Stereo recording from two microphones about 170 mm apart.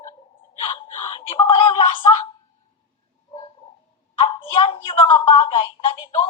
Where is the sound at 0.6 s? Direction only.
25° left (ahead or behind).